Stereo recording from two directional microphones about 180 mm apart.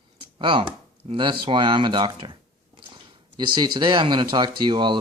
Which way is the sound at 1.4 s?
25° right (ahead or behind).